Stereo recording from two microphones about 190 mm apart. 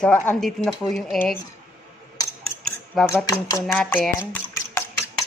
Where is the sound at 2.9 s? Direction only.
Centre (ahead or behind).